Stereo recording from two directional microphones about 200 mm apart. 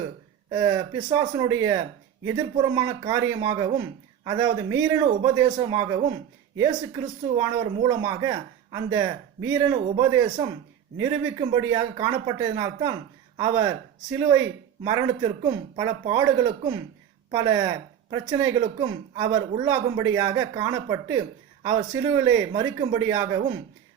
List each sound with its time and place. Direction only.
0.5 s a woman's voice: 20° right (ahead or behind)
7.3 s a woman's voice: 20° right (ahead or behind)